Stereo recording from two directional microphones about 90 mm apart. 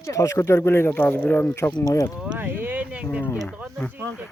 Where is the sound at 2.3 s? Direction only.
20° right (ahead or behind).